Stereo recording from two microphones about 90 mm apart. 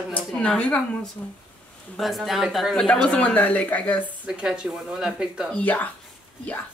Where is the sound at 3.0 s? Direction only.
10° left (ahead or behind).